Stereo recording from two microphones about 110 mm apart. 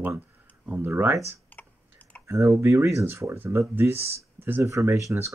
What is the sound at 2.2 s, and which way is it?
Speech, 25° right (ahead or behind).